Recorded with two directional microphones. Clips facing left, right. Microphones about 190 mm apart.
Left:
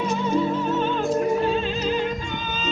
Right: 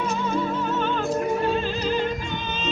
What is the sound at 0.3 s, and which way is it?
Music, 20° left (ahead or behind).